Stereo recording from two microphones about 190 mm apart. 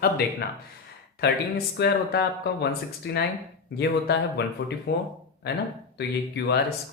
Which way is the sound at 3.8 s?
60° left (ahead or behind).